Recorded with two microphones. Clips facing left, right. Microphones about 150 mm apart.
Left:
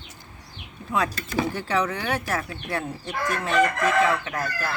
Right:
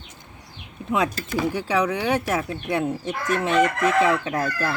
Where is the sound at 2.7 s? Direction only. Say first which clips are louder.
Right 7 dB; 20° right (ahead or behind).